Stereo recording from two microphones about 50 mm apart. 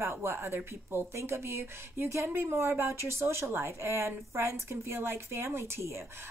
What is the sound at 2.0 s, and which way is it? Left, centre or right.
A woman's voice, right.